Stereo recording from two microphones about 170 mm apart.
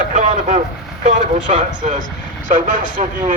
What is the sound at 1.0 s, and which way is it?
Speech, 45° right (ahead or behind).